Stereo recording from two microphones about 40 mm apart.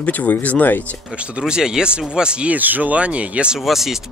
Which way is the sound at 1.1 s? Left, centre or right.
Right.